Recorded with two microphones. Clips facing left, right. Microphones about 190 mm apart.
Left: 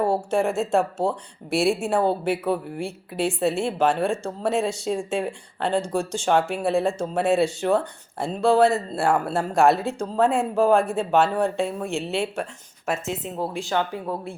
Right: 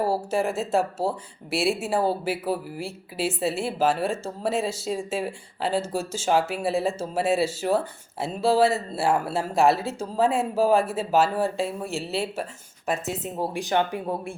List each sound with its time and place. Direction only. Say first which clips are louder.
0.0 s speech: left 2 dB; 5° right (ahead or behind)
13.4 s a woman's voice: right 1 dB; 15° right (ahead or behind)